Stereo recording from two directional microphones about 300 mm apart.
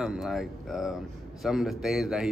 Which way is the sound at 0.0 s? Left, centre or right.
Centre.